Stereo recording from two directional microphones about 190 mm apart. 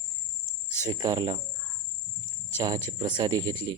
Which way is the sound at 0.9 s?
20° right (ahead or behind).